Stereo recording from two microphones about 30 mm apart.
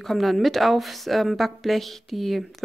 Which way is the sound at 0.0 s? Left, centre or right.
Centre.